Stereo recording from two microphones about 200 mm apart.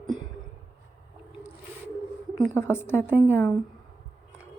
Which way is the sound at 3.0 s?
10° right (ahead or behind).